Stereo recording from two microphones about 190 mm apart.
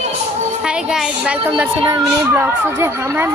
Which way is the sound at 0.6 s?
5° right (ahead or behind).